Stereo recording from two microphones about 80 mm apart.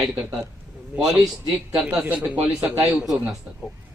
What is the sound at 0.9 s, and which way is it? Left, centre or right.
Speech, centre.